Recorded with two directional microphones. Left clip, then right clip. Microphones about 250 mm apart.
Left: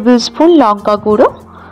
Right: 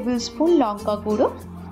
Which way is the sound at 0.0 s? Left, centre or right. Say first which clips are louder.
Left 13 dB; left.